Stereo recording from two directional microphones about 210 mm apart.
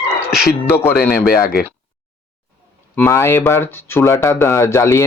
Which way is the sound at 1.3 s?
45° left (ahead or behind).